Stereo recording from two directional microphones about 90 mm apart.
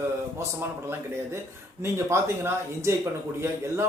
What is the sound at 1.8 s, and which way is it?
Speech, 30° right (ahead or behind).